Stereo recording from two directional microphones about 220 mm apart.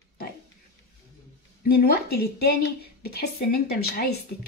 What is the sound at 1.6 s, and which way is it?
A woman's voice, 45° left (ahead or behind).